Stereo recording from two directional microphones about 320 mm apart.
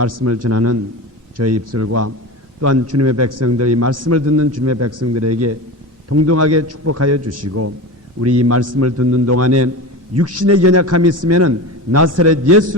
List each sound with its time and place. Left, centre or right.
0.1 s a man's voice: right
0.4 s a man's voice: right